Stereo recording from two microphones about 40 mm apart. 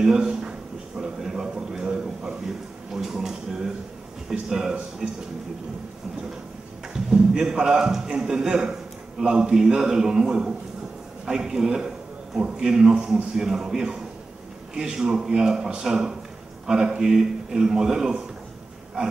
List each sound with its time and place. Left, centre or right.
0.0 s a sound: centre
4.3 s a man's voice: centre
6.9 s a man's voice: centre